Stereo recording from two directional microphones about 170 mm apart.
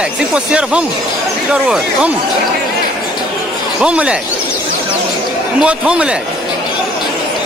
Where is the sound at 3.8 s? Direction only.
5° right (ahead or behind).